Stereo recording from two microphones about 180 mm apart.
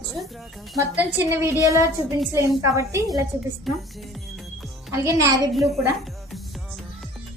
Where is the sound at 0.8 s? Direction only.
10° right (ahead or behind).